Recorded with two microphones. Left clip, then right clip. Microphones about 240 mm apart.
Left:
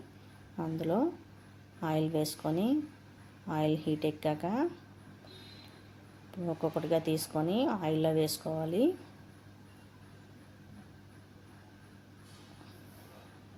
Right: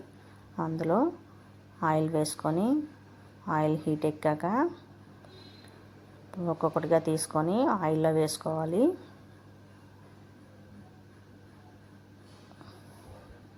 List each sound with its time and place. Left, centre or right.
0.5 s speech: centre
2.1 s a woman's voice: centre
3.7 s a woman's voice: right
4.0 s speech: centre
6.4 s speech: centre